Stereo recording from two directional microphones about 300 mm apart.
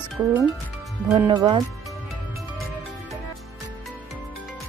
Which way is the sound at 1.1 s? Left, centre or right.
Centre.